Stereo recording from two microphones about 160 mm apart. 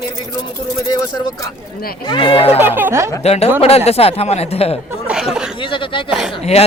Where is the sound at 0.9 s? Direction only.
25° left (ahead or behind).